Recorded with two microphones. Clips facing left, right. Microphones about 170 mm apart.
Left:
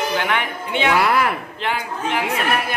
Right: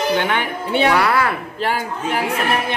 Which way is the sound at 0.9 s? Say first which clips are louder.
Right 1 dB; 20° left (ahead or behind).